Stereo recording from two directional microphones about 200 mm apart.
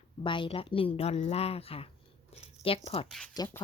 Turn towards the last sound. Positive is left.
turn(degrees=20)  # may be behind; listen again after turning